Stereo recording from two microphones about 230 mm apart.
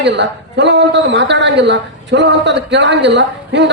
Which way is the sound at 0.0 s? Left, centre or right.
Right.